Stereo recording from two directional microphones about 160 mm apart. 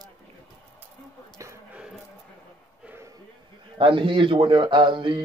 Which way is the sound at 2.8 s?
15° right (ahead or behind).